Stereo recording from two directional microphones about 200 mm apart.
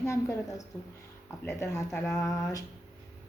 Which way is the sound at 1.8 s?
5° left (ahead or behind).